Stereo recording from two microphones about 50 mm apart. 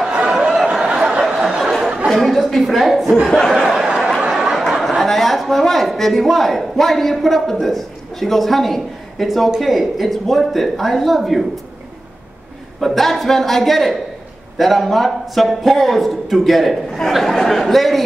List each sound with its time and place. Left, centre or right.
0.1 s a sound: centre
2.0 s a woman's voice: centre
3.3 s a man's voice: centre
3.7 s a sound: centre
4.7 s a man's voice: centre
12.8 s a man's voice: centre